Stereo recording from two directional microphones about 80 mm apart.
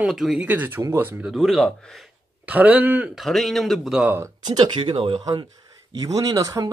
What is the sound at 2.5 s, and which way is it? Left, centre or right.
Speech, centre.